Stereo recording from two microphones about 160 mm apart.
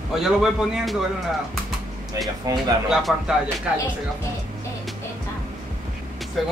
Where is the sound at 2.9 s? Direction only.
5° right (ahead or behind).